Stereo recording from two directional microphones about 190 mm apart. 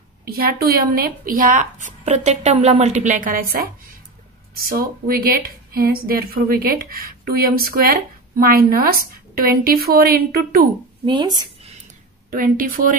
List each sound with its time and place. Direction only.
0.4 s a woman's voice: 55° right (ahead or behind)
11.1 s speech: 20° right (ahead or behind)
12.3 s a woman's voice: 45° right (ahead or behind)